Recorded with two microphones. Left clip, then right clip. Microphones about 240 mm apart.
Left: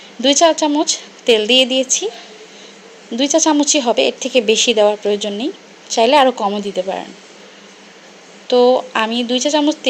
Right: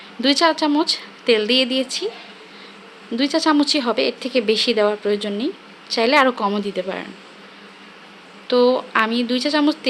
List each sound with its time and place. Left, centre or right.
0.2 s a woman's voice: centre
3.3 s a woman's voice: centre
8.4 s a woman's voice: centre